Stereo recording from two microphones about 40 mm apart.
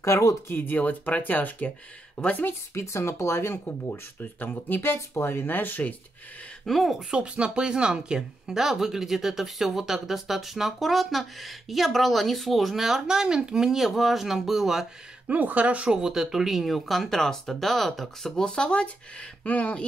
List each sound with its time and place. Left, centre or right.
0.6 s speech: left
3.0 s speech: left
4.8 s speech: left
6.6 s speech: centre
7.0 s speech: right
8.5 s speech: centre
13.0 s speech: centre
15.2 s speech: right
15.9 s speech: centre; by 18.9 s left
19.4 s speech: left